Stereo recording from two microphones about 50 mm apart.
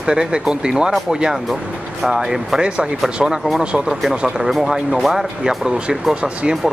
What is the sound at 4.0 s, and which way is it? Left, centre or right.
Speech, centre.